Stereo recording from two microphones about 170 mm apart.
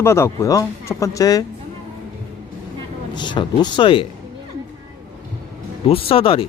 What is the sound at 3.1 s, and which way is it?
Speech, 25° left (ahead or behind).